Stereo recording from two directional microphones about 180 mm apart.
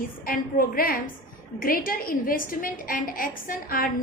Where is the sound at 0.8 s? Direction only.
55° left (ahead or behind).